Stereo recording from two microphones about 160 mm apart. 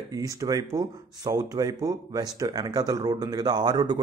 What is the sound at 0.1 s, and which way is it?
Speech, 20° right (ahead or behind).